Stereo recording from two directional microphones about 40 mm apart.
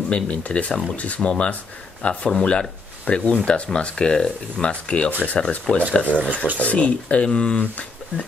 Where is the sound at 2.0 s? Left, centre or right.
Left.